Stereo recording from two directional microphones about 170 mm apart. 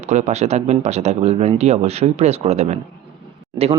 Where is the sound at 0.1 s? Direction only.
45° right (ahead or behind).